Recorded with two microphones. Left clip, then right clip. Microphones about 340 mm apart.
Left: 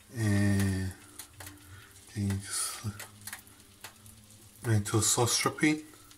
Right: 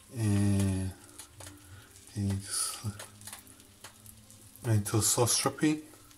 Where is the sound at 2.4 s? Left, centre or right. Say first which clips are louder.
Even; centre.